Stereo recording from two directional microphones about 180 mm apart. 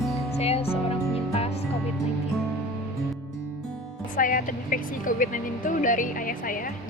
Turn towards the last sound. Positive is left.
turn(degrees=50)  # may be behind; listen again after turning